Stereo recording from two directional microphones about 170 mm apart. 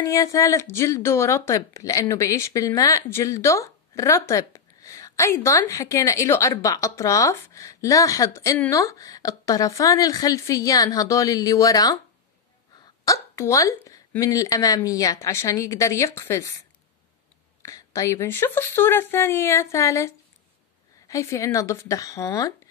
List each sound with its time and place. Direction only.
0.0 s speech: 20° left (ahead or behind)
13.0 s a woman's voice: 20° left (ahead or behind)